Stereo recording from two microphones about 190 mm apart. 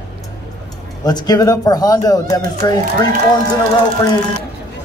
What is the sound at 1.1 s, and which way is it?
Speech, 20° left (ahead or behind).